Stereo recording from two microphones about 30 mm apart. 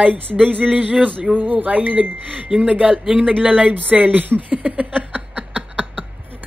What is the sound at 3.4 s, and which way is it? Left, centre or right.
Speech, right.